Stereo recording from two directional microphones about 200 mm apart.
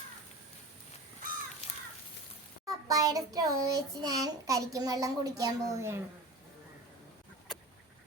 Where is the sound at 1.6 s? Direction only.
35° left (ahead or behind).